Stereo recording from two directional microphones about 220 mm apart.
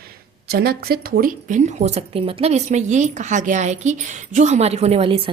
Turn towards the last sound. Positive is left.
turn(degrees=-25)  # may be behind; listen again after turning